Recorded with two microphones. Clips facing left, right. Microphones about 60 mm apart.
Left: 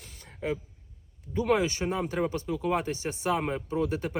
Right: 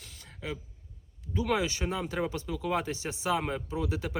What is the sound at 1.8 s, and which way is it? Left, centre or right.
Speech, centre.